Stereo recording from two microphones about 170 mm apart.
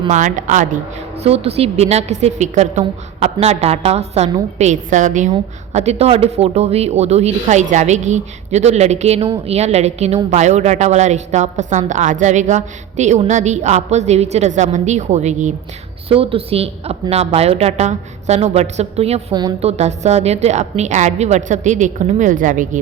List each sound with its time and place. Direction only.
0.1 s a woman's voice: 50° right (ahead or behind)
1.2 s a woman's voice: 35° right (ahead or behind)
16.0 s speech: 35° right (ahead or behind)
19.3 s a woman's voice: 25° right (ahead or behind)
19.6 s a woman's voice: 40° right (ahead or behind)